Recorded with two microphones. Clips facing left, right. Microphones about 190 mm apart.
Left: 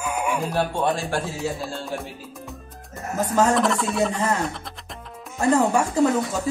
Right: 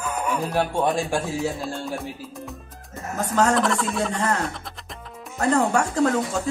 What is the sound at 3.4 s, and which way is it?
A man's voice, 5° left (ahead or behind).